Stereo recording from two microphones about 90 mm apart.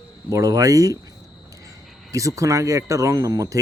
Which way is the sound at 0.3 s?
40° right (ahead or behind).